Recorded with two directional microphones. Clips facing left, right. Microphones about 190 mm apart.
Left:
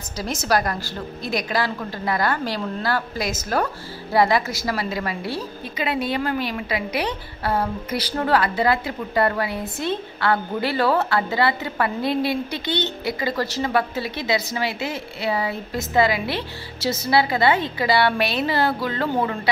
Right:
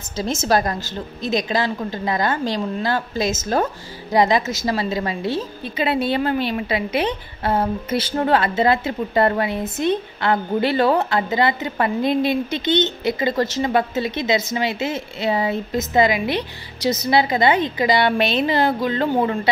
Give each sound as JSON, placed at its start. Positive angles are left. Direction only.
{"t": 0.2, "sound": "a woman's voice", "side_deg": -25}